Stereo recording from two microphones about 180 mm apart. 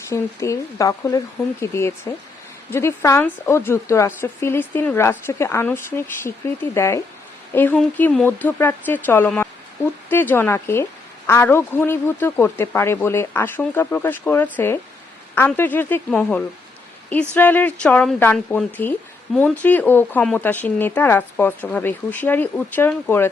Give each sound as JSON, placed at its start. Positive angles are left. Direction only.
{"t": 0.1, "sound": "a woman's voice", "side_deg": 15}